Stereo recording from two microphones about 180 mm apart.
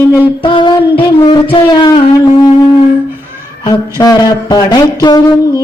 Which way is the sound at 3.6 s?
20° left (ahead or behind).